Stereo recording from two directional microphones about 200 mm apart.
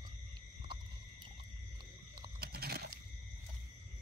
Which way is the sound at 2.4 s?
50° right (ahead or behind).